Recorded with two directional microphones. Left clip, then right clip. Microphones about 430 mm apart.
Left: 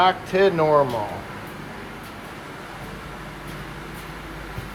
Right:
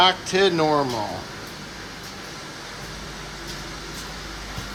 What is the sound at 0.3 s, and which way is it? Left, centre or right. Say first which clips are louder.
Speech: left 5 dB; centre.